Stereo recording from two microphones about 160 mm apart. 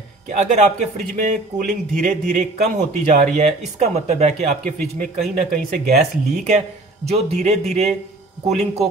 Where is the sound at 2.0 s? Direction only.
50° right (ahead or behind).